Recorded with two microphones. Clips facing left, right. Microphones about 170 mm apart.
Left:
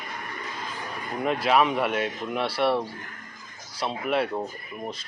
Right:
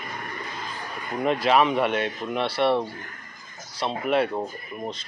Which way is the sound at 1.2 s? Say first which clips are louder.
Right 2 dB; 5° left (ahead or behind).